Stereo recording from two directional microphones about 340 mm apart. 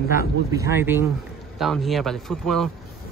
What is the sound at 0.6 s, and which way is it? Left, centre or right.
Speech, centre.